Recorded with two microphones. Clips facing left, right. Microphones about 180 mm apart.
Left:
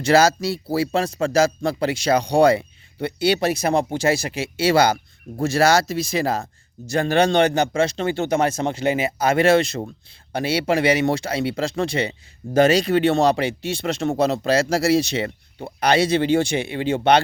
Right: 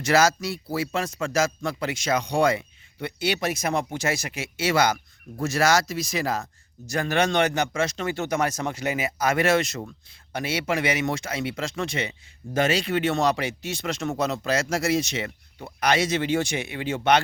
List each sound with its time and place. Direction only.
0.0 s speech: 30° left (ahead or behind)